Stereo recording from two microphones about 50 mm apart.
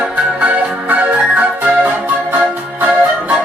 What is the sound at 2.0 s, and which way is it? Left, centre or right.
Music, right.